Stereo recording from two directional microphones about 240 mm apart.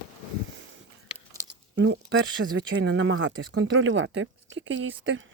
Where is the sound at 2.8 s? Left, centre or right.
Right.